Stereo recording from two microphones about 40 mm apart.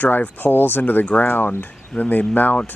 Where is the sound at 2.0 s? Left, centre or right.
Left.